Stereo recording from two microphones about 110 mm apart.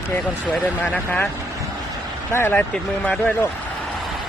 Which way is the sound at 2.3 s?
20° left (ahead or behind).